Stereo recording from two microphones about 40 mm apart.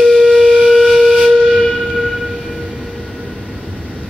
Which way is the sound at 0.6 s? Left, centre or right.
Centre.